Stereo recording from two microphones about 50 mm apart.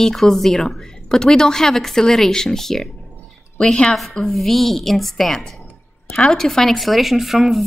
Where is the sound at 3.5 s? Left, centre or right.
Centre.